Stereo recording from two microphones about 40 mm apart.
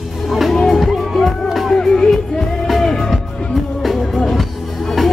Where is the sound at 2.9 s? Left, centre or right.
Centre.